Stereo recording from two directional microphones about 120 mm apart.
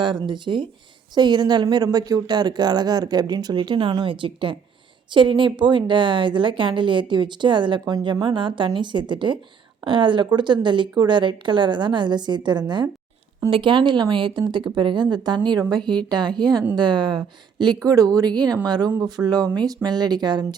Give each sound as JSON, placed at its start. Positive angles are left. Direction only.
{"t": 0.0, "sound": "a woman's voice", "side_deg": -40}
{"t": 17.7, "sound": "speech", "side_deg": -30}